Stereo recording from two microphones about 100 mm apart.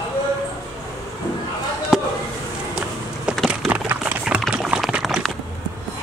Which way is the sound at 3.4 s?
15° right (ahead or behind).